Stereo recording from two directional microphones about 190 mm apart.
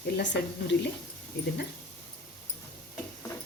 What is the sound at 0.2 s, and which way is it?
Speech, 65° left (ahead or behind).